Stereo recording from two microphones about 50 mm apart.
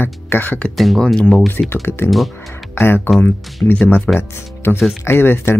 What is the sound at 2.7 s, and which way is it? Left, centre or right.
Speech, left.